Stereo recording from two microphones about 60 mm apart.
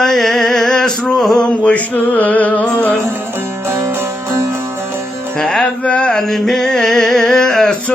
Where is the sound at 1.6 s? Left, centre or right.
Left.